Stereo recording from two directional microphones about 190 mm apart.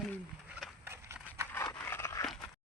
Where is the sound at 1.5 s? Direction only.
10° left (ahead or behind).